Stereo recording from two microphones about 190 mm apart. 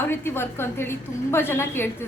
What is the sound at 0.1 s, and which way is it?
A woman's voice, 10° left (ahead or behind).